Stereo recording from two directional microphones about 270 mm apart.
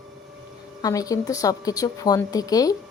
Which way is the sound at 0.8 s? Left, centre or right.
Centre.